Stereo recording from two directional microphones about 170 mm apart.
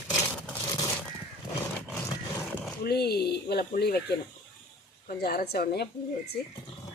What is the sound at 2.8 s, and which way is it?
Speech, 70° left (ahead or behind).